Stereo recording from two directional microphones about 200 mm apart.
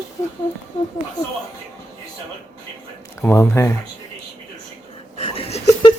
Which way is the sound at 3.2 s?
10° left (ahead or behind).